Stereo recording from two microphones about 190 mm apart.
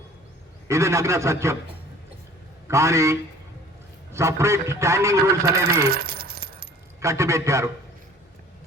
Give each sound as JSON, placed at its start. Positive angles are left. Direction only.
{"t": 0.7, "sound": "a man's voice", "side_deg": -15}
{"t": 2.6, "sound": "a man's voice", "side_deg": -15}
{"t": 5.8, "sound": "keys jangling", "side_deg": -60}
{"t": 7.0, "sound": "a man's voice", "side_deg": -15}